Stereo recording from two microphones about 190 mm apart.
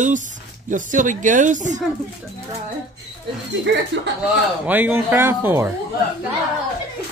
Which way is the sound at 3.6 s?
65° right (ahead or behind).